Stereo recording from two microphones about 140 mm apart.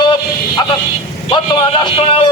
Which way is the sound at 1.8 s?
40° left (ahead or behind).